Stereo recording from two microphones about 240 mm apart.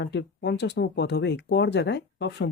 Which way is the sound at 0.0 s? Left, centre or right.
Left.